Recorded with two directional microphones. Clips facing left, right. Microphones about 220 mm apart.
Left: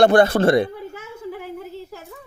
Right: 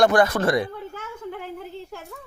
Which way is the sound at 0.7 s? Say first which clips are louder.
Left 1 dB; 10° left (ahead or behind).